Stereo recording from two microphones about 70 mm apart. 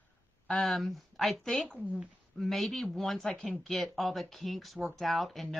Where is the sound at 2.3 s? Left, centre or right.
Centre.